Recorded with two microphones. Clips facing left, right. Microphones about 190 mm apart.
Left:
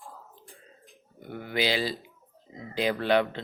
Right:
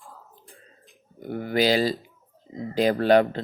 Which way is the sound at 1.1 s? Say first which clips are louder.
Right 6 dB; 40° right (ahead or behind).